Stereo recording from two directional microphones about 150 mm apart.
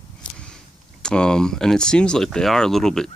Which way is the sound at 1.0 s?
5° left (ahead or behind).